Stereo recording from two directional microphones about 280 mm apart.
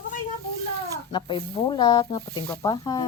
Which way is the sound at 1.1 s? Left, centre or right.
Centre.